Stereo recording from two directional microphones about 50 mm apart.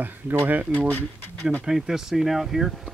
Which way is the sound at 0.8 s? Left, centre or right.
Left.